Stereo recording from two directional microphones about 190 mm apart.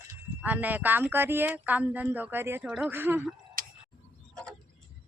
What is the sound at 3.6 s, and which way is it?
Tick-tock, 50° right (ahead or behind).